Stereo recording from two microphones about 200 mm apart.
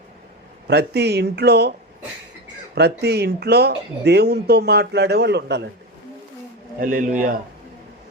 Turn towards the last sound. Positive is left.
turn(degrees=-45)  # may be behind; listen again after turning